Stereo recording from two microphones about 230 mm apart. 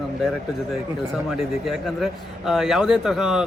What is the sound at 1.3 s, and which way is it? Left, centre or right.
A man's voice, centre.